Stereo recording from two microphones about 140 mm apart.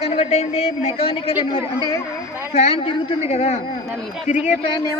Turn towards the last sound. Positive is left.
turn(degrees=35)  # may be behind; listen again after turning